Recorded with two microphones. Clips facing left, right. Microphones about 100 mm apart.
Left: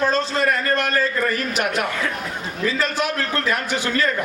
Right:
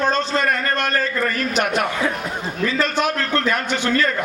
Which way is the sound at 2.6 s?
55° right (ahead or behind).